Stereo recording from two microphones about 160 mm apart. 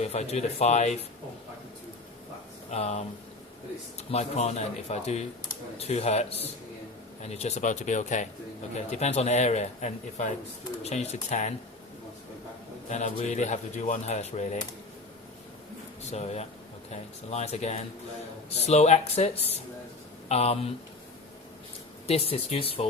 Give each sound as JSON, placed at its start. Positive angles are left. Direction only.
{"t": 0.0, "sound": "speech", "side_deg": 40}
{"t": 2.6, "sound": "speech", "side_deg": 40}
{"t": 4.1, "sound": "speech", "side_deg": 45}
{"t": 12.9, "sound": "speech", "side_deg": 45}
{"t": 16.1, "sound": "speech", "side_deg": 40}
{"t": 22.0, "sound": "speech", "side_deg": 40}